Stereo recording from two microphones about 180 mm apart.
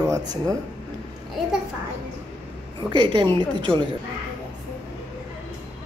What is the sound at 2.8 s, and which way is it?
A woman's voice, 25° right (ahead or behind).